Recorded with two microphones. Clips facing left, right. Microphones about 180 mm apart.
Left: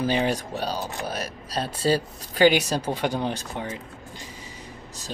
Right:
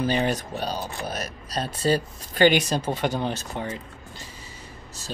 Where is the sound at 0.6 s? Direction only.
15° right (ahead or behind).